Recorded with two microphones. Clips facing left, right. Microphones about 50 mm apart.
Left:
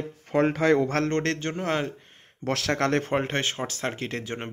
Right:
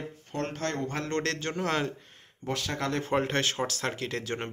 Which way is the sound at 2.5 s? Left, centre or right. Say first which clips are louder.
Left 6 dB; left.